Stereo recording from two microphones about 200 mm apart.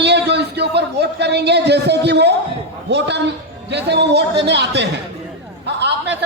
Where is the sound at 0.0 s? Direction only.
60° right (ahead or behind).